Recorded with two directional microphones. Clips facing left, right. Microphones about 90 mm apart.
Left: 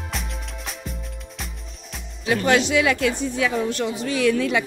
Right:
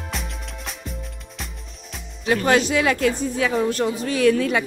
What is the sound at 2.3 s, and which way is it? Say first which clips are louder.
A woman's voice: right 1 dB; 40° right (ahead or behind).